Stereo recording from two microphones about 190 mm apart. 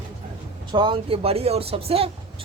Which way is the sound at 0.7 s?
25° right (ahead or behind).